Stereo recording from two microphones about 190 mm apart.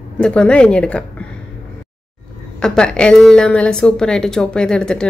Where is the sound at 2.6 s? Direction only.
5° left (ahead or behind).